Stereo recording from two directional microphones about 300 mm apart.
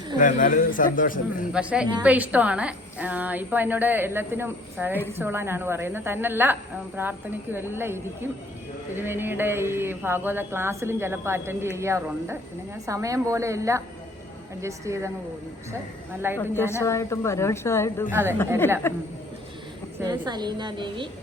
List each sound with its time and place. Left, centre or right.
0.2 s speech: left
1.5 s a woman's voice: centre
16.4 s a woman's voice: centre
18.1 s speech: centre
18.8 s a woman's voice: centre
20.0 s speech: centre